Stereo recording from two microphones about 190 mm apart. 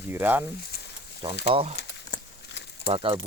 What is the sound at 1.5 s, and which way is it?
Speech, 30° right (ahead or behind).